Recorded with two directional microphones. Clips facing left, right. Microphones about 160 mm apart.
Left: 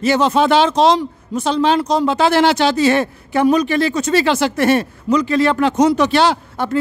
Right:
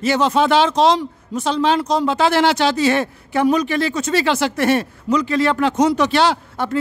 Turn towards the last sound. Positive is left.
turn(degrees=30)  # may be behind; listen again after turning